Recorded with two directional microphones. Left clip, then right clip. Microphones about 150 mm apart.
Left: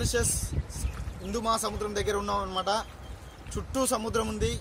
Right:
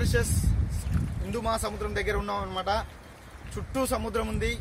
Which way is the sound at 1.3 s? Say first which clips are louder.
Left 1 dB; centre (ahead or behind).